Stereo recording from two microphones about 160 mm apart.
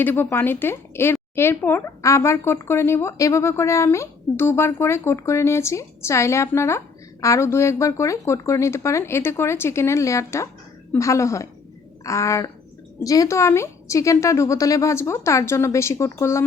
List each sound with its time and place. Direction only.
0.0 s a woman's voice: 10° left (ahead or behind)